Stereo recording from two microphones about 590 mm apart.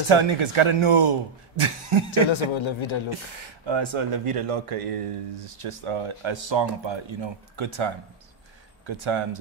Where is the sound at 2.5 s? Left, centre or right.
Left.